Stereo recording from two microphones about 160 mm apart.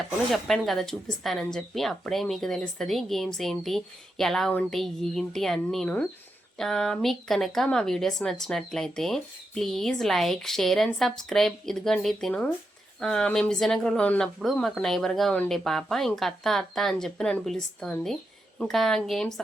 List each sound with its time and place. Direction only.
0.3 s speech: centre (ahead or behind)